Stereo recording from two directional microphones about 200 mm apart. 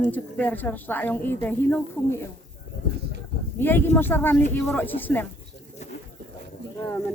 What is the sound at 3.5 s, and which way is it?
Speech, 10° left (ahead or behind).